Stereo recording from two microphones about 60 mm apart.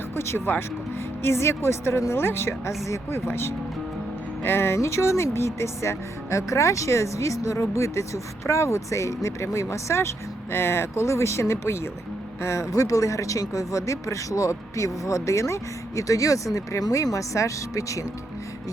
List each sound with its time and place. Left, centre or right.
0.2 s speech: left
3.2 s speech: left